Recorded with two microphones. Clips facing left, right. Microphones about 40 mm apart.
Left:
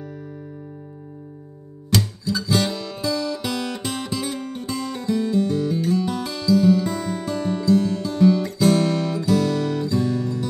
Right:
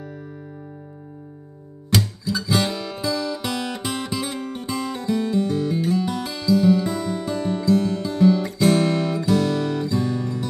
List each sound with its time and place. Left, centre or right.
1.9 s guitar: centre
4.6 s music: right
4.9 s music: centre